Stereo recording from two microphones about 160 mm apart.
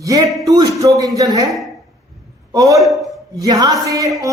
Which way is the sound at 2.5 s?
20° right (ahead or behind).